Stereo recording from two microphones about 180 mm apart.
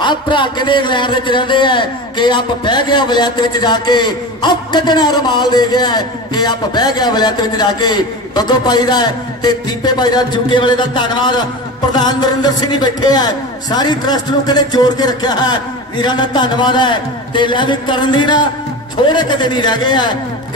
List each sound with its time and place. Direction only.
0.0 s a man's voice: 25° left (ahead or behind)